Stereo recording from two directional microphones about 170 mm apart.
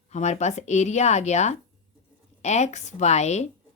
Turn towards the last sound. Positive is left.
turn(degrees=40)  # may be behind; listen again after turning